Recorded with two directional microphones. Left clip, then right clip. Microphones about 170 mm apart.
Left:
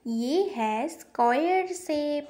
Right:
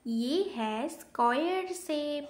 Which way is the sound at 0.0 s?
20° left (ahead or behind).